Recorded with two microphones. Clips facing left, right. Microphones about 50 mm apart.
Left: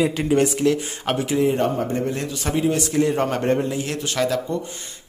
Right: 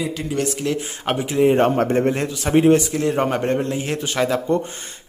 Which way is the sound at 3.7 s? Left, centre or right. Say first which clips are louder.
Right 2 dB; right.